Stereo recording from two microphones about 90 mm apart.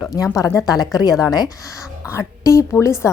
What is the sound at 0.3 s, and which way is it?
A woman's voice, 40° left (ahead or behind).